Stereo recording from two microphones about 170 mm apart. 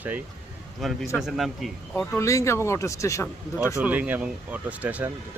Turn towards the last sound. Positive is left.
turn(degrees=-10)  # may be behind; listen again after turning